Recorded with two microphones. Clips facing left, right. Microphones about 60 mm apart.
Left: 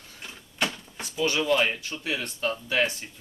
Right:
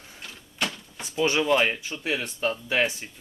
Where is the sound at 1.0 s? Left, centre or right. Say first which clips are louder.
Right 3 dB; right.